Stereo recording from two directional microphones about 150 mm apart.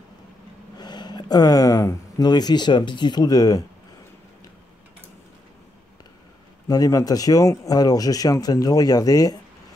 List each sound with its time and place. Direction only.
0.7 s speech: 30° left (ahead or behind)
6.7 s speech: 25° left (ahead or behind)